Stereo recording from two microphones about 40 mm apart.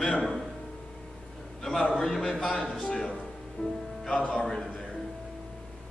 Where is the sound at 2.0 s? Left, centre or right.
Centre.